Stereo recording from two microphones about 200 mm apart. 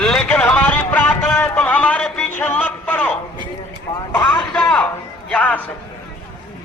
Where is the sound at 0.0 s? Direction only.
5° left (ahead or behind).